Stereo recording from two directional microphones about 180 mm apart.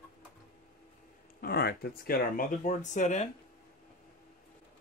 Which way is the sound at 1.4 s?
60° left (ahead or behind).